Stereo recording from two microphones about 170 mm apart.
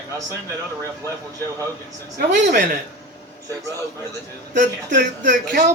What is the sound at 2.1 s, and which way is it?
Speech, 55° right (ahead or behind).